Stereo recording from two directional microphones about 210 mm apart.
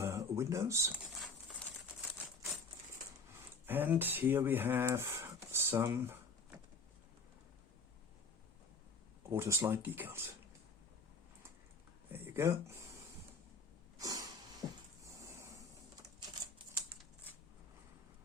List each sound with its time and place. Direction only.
0.0 s speech: 15° right (ahead or behind)
1.1 s patter: centre (ahead or behind)
3.7 s speech: 10° right (ahead or behind)
9.3 s speech: 15° right (ahead or behind)
12.1 s a sound: 10° right (ahead or behind)
14.0 s a sound: 15° right (ahead or behind)